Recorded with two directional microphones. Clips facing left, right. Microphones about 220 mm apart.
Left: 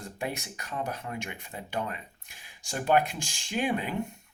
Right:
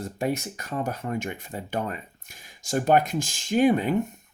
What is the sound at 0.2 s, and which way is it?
Speech, 40° right (ahead or behind).